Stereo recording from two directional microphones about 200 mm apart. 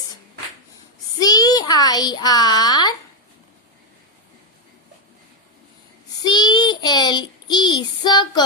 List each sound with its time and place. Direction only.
1.2 s a child's voice: 20° left (ahead or behind)
6.2 s child singing: 20° left (ahead or behind)